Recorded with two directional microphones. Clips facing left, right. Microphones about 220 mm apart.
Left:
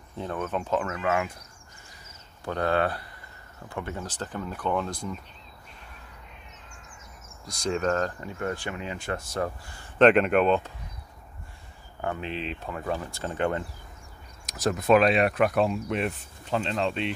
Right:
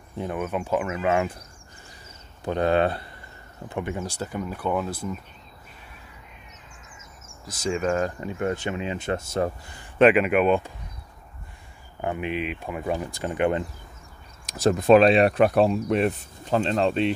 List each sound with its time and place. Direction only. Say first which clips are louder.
0.2 s speech: right 2 dB; 10° right (ahead or behind)
1.0 s speech: right 4 dB; 30° right (ahead or behind)
2.4 s speech: right 4 dB; 20° right (ahead or behind)
7.4 s speech: right 1 dB; 5° right (ahead or behind); by 9.8 s 25° right (ahead or behind)
9.9 s speech: right 1 dB; 5° right (ahead or behind)
12.0 s speech: right 4 dB; 15° right (ahead or behind)
14.4 s speech: right 6 dB; 30° right (ahead or behind)